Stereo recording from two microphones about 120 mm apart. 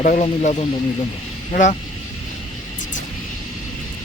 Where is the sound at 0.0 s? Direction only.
90° left.